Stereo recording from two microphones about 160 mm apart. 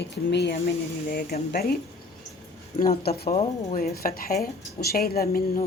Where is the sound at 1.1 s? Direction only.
70° left (ahead or behind).